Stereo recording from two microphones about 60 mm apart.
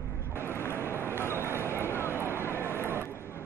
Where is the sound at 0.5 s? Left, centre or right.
Left.